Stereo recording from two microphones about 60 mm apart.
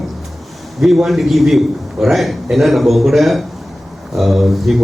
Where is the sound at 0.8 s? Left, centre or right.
Centre.